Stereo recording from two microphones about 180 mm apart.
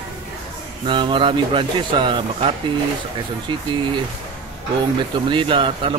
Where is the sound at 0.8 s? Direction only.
25° right (ahead or behind).